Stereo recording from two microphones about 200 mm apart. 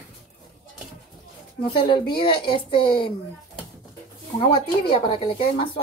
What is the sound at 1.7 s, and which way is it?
A woman's voice, 25° left (ahead or behind).